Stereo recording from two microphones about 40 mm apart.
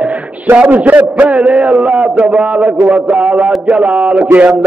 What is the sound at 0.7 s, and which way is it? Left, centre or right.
A man's voice, right.